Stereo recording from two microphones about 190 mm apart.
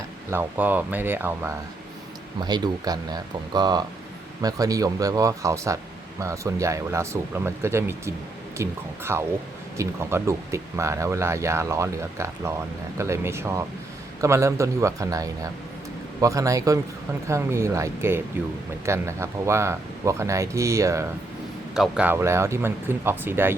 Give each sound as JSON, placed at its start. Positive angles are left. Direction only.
{"t": 0.3, "sound": "speech", "side_deg": -10}